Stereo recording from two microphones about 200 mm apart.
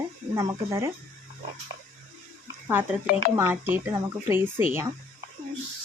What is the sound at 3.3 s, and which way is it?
Speech, 10° right (ahead or behind).